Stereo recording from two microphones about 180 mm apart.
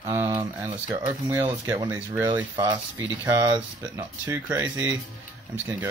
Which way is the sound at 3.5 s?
10° right (ahead or behind).